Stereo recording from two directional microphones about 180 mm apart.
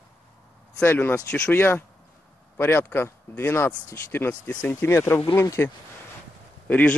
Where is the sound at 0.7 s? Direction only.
10° left (ahead or behind).